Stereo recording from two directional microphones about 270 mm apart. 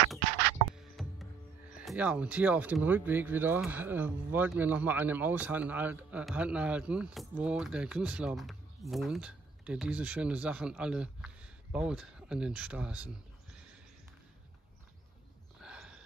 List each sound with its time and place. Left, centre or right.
0.7 s music: centre
1.8 s speech: centre
15.6 s a sound: centre